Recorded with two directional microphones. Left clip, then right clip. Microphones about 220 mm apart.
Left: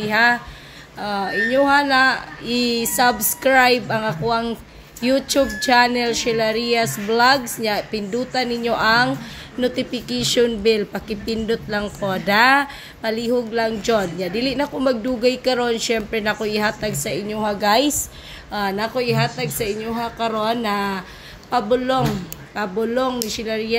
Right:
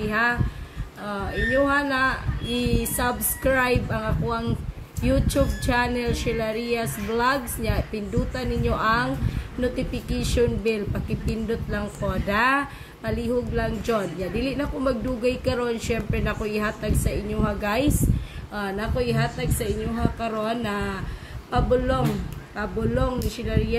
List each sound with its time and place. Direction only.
0.0 s speech: 35° left (ahead or behind)